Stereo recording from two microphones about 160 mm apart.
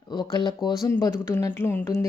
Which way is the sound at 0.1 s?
25° left (ahead or behind).